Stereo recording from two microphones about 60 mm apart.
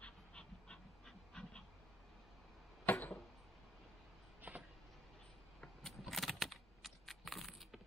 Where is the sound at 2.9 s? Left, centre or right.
Left.